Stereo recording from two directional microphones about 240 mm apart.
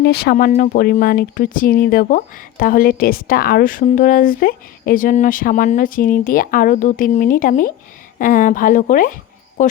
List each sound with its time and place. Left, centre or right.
0.0 s speech: left